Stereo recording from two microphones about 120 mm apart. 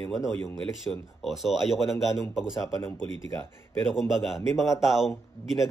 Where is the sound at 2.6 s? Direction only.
20° left (ahead or behind).